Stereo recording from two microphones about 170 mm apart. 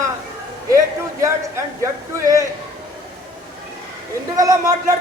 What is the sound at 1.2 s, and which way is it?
Speech, 20° right (ahead or behind).